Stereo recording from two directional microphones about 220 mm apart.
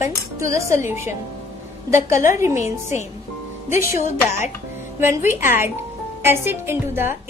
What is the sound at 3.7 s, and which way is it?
Speech, 10° right (ahead or behind).